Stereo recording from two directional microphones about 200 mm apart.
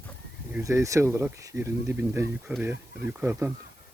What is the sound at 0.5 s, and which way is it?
Speech, 15° right (ahead or behind).